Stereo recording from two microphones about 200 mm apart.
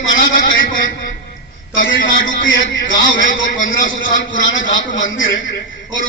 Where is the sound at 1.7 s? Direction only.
70° left (ahead or behind).